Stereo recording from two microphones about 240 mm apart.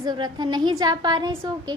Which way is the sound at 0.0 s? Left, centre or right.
Centre.